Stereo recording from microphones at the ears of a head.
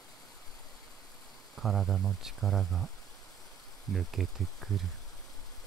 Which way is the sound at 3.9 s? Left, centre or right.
Right.